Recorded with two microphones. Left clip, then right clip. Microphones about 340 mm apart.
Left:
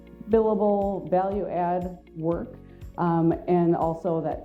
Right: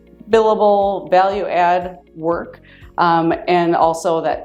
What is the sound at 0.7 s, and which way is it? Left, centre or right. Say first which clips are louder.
Speech: right 10 dB; right.